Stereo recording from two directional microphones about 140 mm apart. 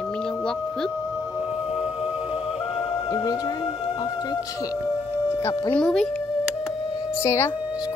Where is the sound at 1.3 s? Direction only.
5° right (ahead or behind).